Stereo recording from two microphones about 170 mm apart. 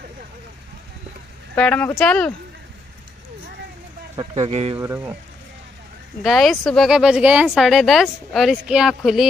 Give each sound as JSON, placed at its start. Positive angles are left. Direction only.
{"t": 1.5, "sound": "speech", "side_deg": 10}
{"t": 4.4, "sound": "speech", "side_deg": -35}
{"t": 4.7, "sound": "speech", "side_deg": -15}
{"t": 6.2, "sound": "speech", "side_deg": 0}